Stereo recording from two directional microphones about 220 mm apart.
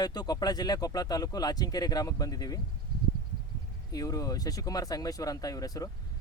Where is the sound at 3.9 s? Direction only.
15° left (ahead or behind).